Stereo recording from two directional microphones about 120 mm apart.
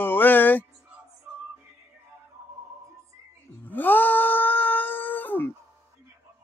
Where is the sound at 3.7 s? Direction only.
15° left (ahead or behind).